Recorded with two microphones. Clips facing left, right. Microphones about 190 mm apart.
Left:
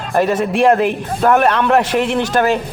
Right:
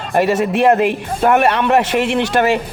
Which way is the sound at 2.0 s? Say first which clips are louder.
Even; 65° right (ahead or behind).